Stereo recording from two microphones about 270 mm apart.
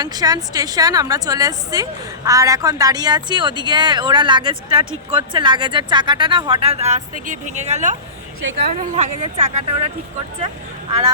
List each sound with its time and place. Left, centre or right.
0.0 s a woman's voice: centre